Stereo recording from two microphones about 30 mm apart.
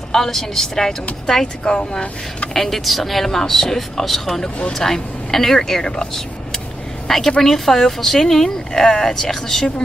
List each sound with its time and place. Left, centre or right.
0.1 s speech: centre
1.6 s speech: left
2.5 s speech: centre
7.1 s a woman's voice: centre